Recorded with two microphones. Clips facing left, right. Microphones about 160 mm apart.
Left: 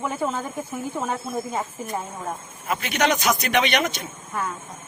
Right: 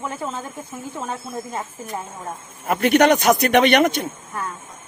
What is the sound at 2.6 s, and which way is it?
Speech, 60° right (ahead or behind).